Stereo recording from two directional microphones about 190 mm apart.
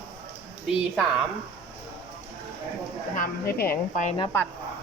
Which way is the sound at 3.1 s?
50° left (ahead or behind).